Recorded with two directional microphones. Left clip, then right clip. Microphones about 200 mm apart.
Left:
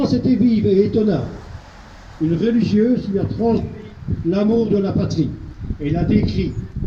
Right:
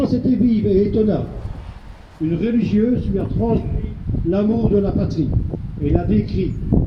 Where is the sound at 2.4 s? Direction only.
45° left (ahead or behind).